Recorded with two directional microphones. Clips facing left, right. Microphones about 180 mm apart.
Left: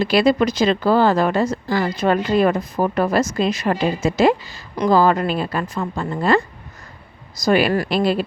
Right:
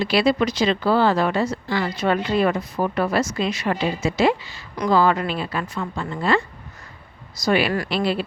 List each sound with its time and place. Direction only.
0.0 s speech: 45° left (ahead or behind)
7.4 s speech: 45° left (ahead or behind)